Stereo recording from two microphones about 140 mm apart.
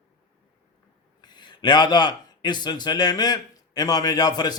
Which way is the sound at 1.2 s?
30° left (ahead or behind).